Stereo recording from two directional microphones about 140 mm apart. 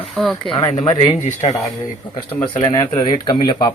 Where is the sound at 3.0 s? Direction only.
35° left (ahead or behind).